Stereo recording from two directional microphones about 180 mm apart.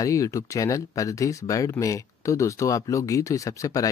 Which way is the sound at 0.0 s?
20° left (ahead or behind).